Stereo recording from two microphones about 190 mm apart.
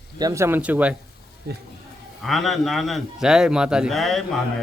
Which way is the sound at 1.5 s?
60° right (ahead or behind).